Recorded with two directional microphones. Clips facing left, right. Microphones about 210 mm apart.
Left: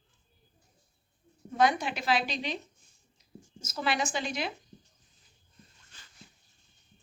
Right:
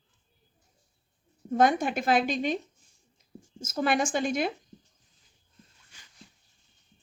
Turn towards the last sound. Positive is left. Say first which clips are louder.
# even
turn(degrees=-10)  # may be behind; listen again after turning